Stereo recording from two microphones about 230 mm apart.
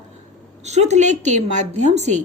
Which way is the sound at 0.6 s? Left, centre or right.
Right.